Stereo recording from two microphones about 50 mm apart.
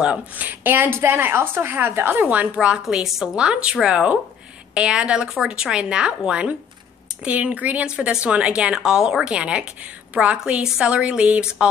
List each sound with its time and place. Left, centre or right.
0.3 s a woman's voice: right
2.5 s a woman's voice: centre
7.8 s a woman's voice: centre